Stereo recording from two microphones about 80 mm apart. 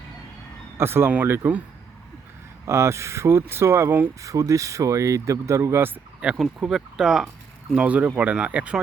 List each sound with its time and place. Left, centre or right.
0.8 s speech: right
2.6 s speech: right
4.2 s speech: right
6.4 s speech: centre
7.7 s speech: centre